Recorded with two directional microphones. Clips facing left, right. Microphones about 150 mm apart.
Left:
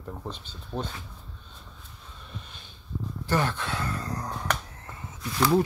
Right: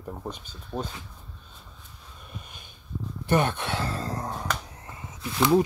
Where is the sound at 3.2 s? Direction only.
20° right (ahead or behind).